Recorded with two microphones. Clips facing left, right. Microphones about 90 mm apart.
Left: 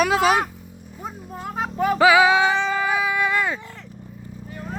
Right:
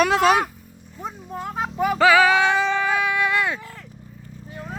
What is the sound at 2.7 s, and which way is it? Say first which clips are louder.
Music: even; 10° left (ahead or behind).